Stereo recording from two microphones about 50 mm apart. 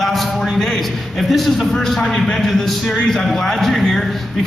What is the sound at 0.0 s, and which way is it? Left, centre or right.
A man's voice, centre.